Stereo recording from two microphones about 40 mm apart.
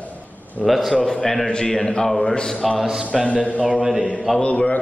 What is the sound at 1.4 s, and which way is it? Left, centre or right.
A man's voice, left.